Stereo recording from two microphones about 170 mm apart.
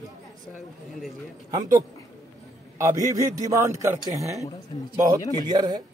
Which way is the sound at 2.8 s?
20° right (ahead or behind).